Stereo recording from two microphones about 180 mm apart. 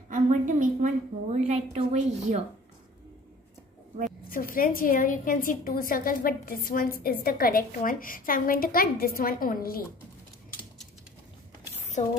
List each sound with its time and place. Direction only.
0.1 s a woman's voice: 45° right (ahead or behind)
4.3 s a woman's voice: 50° left (ahead or behind)
12.0 s speech: 40° left (ahead or behind)